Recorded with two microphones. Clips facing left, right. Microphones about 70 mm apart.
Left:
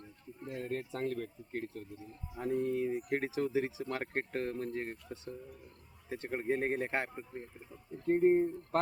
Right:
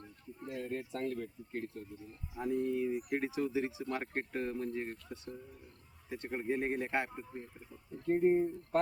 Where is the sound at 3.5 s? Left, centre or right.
Left.